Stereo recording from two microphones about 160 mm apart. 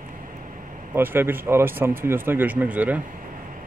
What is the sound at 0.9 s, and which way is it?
Speech, 15° right (ahead or behind).